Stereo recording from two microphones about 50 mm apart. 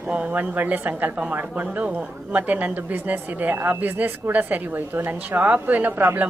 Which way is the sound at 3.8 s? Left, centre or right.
Right.